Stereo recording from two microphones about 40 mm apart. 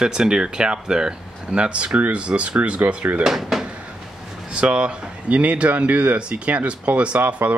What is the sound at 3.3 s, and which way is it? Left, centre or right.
Speech, centre.